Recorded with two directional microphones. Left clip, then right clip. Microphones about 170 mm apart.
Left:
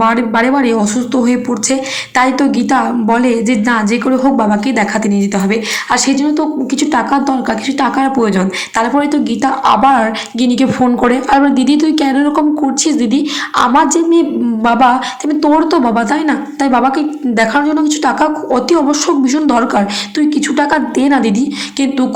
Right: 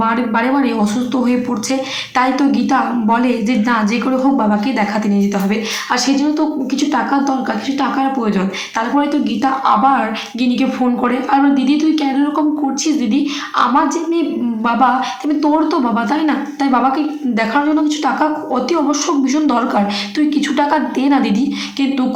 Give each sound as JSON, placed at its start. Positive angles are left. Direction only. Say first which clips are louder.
{"t": 0.0, "sound": "a woman's voice", "louder": "left 4 dB", "side_deg": 25}